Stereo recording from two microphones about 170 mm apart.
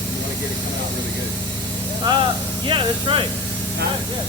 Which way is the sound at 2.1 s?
25° right (ahead or behind).